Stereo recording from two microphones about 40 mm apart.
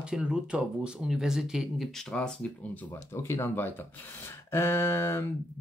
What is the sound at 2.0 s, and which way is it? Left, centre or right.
Speech, left.